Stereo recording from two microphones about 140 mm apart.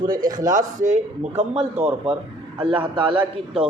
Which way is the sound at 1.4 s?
50° right (ahead or behind).